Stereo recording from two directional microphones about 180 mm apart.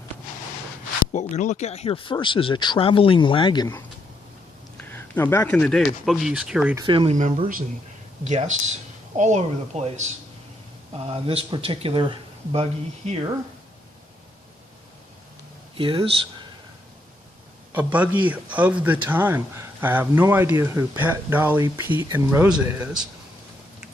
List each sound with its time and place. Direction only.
1.1 s speech: 40° left (ahead or behind); by 3.7 s 25° left (ahead or behind)
4.8 s speech: 10° left (ahead or behind); by 6.7 s 5° right (ahead or behind)
6.7 s speech: 30° right (ahead or behind)
8.2 s speech: 40° right (ahead or behind)
15.8 s speech: 30° right (ahead or behind)
17.7 s a man's voice: 10° right (ahead or behind)